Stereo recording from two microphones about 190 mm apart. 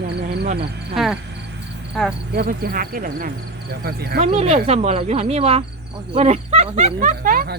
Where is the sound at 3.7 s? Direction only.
55° right (ahead or behind).